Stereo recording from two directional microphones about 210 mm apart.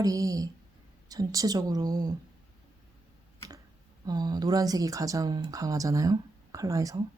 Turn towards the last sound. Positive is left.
turn(degrees=-15)  # may be behind; listen again after turning